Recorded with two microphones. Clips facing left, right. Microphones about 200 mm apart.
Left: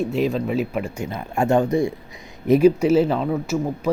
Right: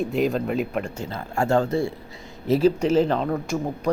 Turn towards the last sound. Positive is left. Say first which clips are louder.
# left 2 dB
turn(degrees=5)  # may be behind; listen again after turning